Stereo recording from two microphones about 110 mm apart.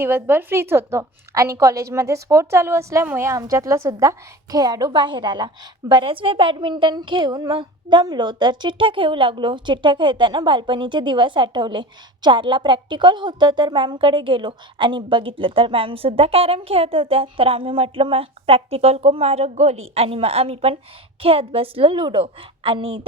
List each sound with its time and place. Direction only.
0.0 s a woman's voice: 20° right (ahead or behind); by 23.0 s 60° right (ahead or behind)